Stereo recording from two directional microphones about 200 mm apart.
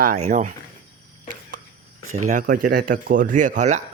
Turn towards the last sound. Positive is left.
turn(degrees=-35)  # may be behind; listen again after turning